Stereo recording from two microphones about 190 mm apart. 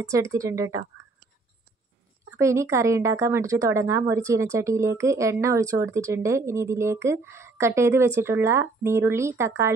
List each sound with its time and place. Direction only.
0.0 s a woman's voice: 15° right (ahead or behind)
2.3 s a woman's voice: 15° right (ahead or behind)